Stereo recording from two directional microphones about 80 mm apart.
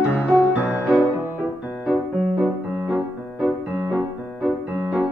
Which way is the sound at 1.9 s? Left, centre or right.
Centre.